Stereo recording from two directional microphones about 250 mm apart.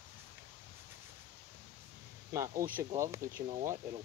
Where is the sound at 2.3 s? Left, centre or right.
Centre.